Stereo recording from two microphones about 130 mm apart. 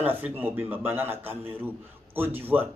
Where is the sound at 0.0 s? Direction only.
15° right (ahead or behind).